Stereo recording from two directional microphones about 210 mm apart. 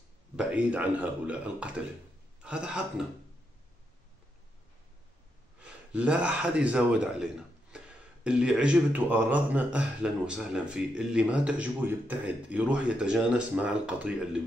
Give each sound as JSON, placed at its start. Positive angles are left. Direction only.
{"t": 0.4, "sound": "a man's voice", "side_deg": -5}
{"t": 5.6, "sound": "a man's voice", "side_deg": -5}